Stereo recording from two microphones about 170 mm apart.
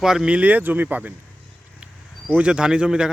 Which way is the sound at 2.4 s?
5° right (ahead or behind).